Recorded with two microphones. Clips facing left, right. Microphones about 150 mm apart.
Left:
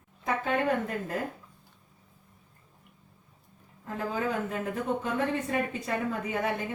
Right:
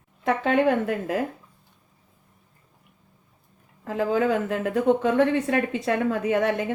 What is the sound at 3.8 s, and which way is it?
A woman's voice, 90° right.